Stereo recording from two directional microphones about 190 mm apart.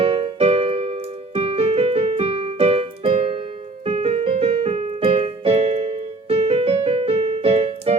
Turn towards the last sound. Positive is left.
turn(degrees=-30)  # may be behind; listen again after turning